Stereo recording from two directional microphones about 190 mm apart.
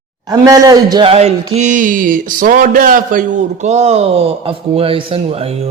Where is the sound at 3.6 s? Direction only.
35° right (ahead or behind).